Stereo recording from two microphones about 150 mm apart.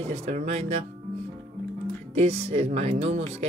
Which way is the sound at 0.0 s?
45° right (ahead or behind).